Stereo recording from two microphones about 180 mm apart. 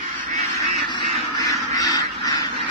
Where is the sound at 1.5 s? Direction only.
20° left (ahead or behind).